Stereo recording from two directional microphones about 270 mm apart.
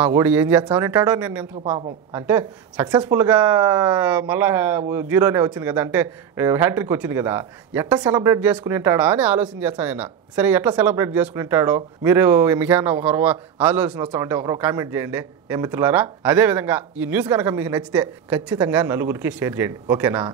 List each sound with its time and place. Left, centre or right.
0.0 s speech: centre
1.6 s a woman's voice: right
2.1 s speech: centre